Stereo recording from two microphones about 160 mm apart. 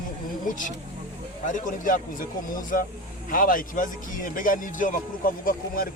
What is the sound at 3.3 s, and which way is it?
Speech, 60° left (ahead or behind).